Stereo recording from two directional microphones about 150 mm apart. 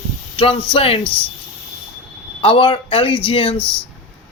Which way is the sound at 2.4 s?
35° left (ahead or behind).